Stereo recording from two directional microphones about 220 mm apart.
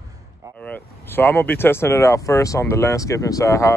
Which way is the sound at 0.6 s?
10° left (ahead or behind).